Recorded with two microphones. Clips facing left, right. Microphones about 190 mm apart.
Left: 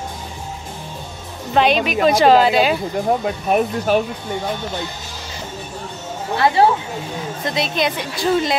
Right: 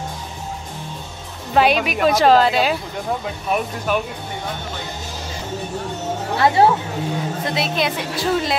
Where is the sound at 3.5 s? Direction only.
40° left (ahead or behind).